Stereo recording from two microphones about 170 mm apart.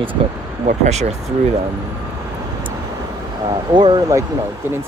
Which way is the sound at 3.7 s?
25° right (ahead or behind).